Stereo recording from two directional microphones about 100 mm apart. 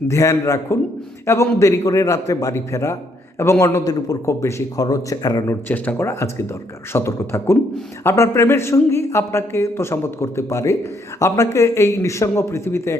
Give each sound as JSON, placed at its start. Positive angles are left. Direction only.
{"t": 0.1, "sound": "a man's voice", "side_deg": 30}
{"t": 5.6, "sound": "speech", "side_deg": 20}